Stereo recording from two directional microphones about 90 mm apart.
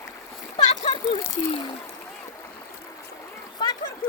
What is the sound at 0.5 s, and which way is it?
Splash, 55° left (ahead or behind).